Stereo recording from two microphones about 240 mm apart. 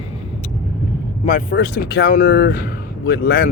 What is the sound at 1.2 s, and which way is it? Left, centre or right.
Speech, left.